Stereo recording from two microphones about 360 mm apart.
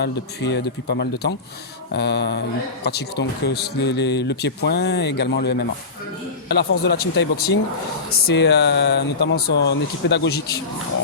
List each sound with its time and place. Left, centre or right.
0.0 s speech: left